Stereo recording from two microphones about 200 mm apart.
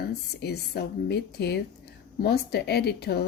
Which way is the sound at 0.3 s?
55° left (ahead or behind).